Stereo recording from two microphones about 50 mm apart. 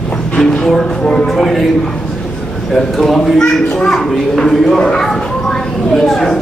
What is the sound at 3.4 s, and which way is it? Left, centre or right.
Speech, centre.